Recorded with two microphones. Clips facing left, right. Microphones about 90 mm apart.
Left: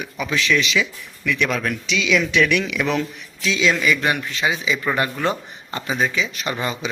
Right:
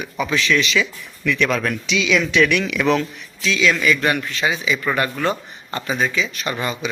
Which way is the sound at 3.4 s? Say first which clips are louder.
Right 1 dB; 20° left (ahead or behind).